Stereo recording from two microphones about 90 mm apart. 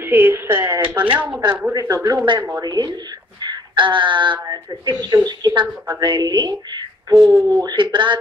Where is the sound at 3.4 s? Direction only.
65° right (ahead or behind).